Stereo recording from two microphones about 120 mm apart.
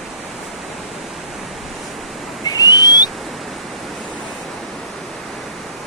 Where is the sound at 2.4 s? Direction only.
30° left (ahead or behind).